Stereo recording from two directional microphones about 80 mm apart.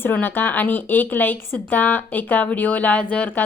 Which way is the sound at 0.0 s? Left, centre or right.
Left.